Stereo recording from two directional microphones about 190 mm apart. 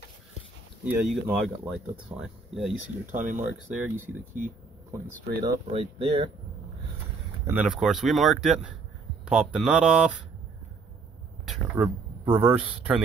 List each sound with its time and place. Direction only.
0.8 s speech: centre (ahead or behind)
3.1 s speech: 40° right (ahead or behind)
3.3 s speech: 10° right (ahead or behind)
5.7 s speech: 30° right (ahead or behind)
7.4 s speech: 5° right (ahead or behind)
11.4 s speech: 5° right (ahead or behind)